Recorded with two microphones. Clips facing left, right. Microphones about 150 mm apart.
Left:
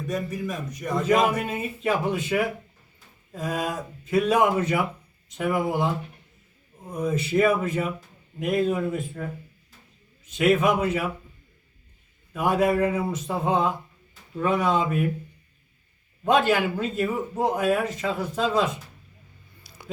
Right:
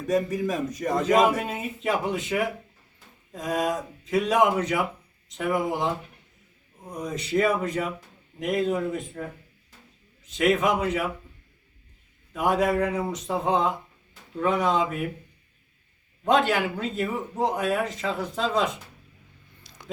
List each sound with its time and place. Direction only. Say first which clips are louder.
0.8 s speech: even; 40° right (ahead or behind)
1.0 s speech: even; centre (ahead or behind)
10.3 s speech: left 2 dB; 5° left (ahead or behind)
12.3 s speech: left 1 dB; centre (ahead or behind)
16.2 s speech: left 1 dB; 5° left (ahead or behind)
19.6 s a sound: left 2 dB; 10° left (ahead or behind)